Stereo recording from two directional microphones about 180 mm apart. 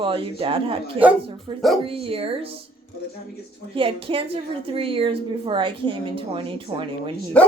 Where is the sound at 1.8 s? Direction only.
30° right (ahead or behind).